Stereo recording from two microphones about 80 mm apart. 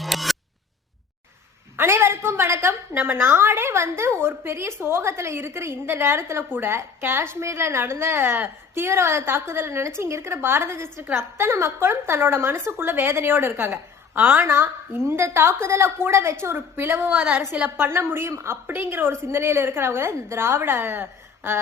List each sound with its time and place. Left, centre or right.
0.0 s scissors: centre
1.7 s a woman's voice: right